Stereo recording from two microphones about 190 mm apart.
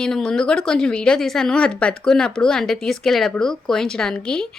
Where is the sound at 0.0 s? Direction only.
5° left (ahead or behind).